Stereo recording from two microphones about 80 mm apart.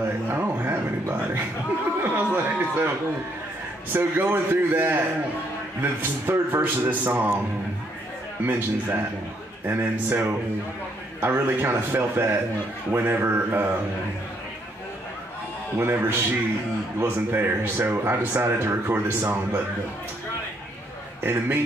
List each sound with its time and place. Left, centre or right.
0.3 s speech: right
3.9 s speech: right
8.5 s speech: right
15.8 s speech: right
21.2 s speech: right